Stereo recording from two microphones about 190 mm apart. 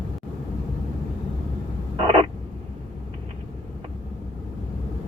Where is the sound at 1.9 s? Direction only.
30° right (ahead or behind).